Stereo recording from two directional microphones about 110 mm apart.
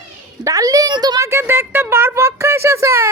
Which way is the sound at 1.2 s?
25° right (ahead or behind).